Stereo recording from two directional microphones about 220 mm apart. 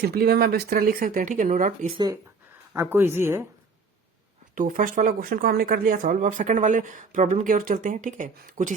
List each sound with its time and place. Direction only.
0.0 s speech: 45° right (ahead or behind)
2.7 s speech: 10° right (ahead or behind)
4.5 s speech: 35° right (ahead or behind)